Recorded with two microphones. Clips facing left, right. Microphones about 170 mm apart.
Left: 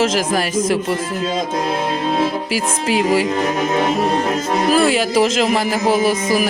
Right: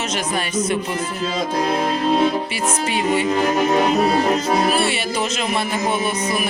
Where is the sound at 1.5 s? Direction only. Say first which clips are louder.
Even; centre (ahead or behind).